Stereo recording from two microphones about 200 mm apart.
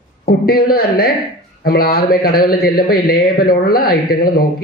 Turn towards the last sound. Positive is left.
turn(degrees=50)  # may be behind; listen again after turning